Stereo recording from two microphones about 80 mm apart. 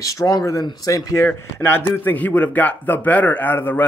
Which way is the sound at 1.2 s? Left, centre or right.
Left.